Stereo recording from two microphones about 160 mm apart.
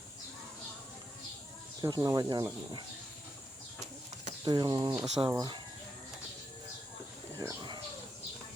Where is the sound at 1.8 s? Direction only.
25° right (ahead or behind).